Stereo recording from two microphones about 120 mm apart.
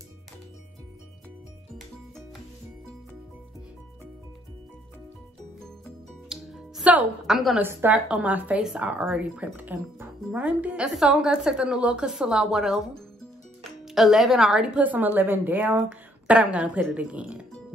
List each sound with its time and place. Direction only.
6.2 s music: 5° right (ahead or behind)
7.5 s speech: 15° right (ahead or behind)